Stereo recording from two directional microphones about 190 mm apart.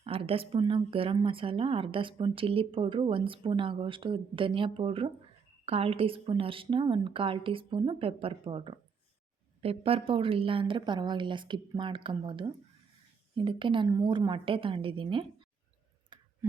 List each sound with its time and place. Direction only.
0.0 s a woman's voice: 30° right (ahead or behind)
16.1 s clicking: 25° right (ahead or behind)